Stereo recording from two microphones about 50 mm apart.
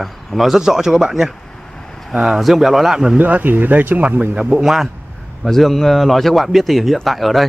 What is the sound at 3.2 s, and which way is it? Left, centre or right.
Speech, right.